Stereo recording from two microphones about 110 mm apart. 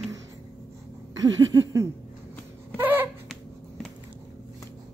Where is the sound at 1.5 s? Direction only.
30° right (ahead or behind).